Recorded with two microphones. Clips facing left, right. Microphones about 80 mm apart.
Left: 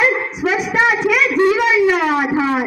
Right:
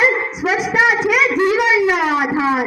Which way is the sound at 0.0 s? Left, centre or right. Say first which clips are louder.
Even; centre.